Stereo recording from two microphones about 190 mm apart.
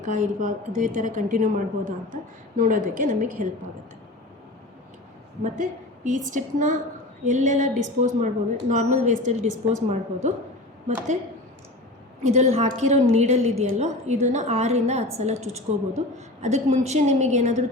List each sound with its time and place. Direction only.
0.0 s a woman's voice: 40° right (ahead or behind)
6.1 s a woman's voice: 40° right (ahead or behind)
12.2 s a woman's voice: 35° right (ahead or behind)